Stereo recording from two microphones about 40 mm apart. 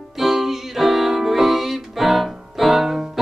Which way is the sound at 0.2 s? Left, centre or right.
Centre.